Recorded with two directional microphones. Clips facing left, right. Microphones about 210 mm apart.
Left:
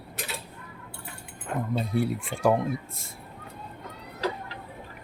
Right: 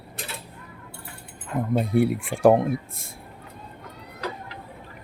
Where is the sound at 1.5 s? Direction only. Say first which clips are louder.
Right 3 dB; 60° left (ahead or behind).